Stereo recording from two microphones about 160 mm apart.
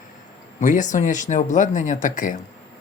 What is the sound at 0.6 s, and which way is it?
Speech, 50° left (ahead or behind).